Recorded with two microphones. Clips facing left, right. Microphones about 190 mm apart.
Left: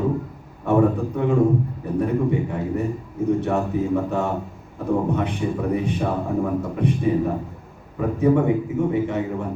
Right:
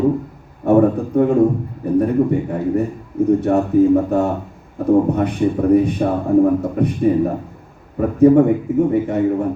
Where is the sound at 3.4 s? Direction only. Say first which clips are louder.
Right 9 dB; 40° right (ahead or behind).